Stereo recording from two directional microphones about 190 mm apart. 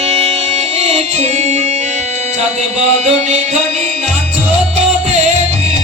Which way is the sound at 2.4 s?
35° right (ahead or behind).